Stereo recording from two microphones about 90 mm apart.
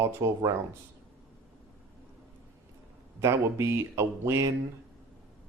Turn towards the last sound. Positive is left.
turn(degrees=-30)  # may be behind; listen again after turning